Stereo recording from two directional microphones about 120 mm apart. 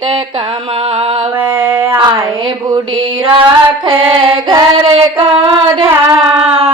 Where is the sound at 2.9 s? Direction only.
50° right (ahead or behind).